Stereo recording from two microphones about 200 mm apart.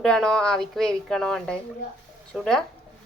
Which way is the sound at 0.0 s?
5° left (ahead or behind).